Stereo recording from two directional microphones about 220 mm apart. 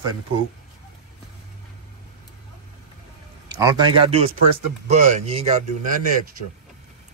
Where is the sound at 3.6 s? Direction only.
20° right (ahead or behind).